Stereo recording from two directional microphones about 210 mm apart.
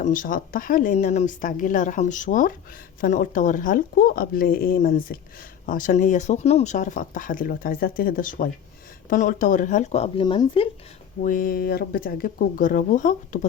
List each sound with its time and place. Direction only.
0.0 s speech: 40° left (ahead or behind); by 10.7 s 25° left (ahead or behind)
11.2 s speech: 40° left (ahead or behind)